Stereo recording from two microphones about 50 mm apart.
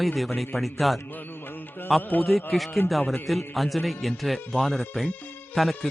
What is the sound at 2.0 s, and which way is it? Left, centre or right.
Speech, left.